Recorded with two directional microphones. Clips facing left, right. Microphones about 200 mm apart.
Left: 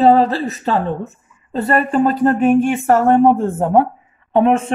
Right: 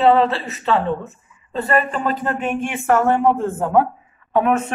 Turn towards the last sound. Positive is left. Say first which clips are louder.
# left 4 dB
turn(degrees=30)  # may be behind; listen again after turning